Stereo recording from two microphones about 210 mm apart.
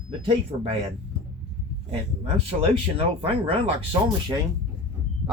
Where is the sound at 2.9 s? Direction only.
25° right (ahead or behind).